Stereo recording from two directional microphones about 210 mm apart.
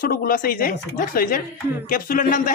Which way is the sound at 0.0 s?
45° left (ahead or behind).